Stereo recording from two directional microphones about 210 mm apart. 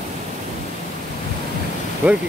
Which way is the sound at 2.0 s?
5° right (ahead or behind).